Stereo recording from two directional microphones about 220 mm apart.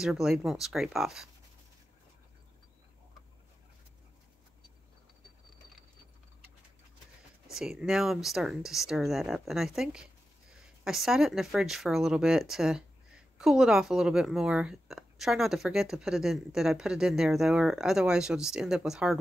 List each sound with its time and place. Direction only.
0.0 s speech: centre (ahead or behind)
7.5 s speech: centre (ahead or behind)